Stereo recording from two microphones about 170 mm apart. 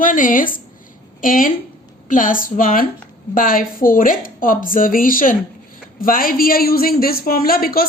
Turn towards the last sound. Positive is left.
turn(degrees=60)  # may be behind; listen again after turning